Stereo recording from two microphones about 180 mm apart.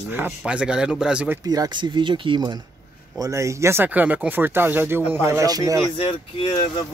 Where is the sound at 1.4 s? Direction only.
20° right (ahead or behind).